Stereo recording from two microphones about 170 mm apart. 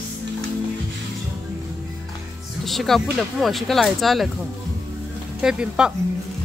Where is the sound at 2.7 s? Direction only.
Centre (ahead or behind).